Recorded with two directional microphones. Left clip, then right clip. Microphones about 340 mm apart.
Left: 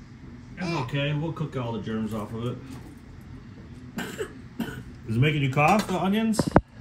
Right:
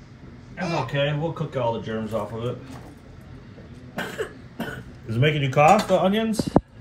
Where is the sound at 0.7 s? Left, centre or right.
Right.